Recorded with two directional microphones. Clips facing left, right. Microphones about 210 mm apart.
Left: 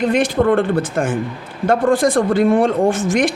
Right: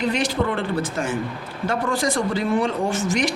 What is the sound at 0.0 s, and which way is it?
A man's voice, 50° left (ahead or behind).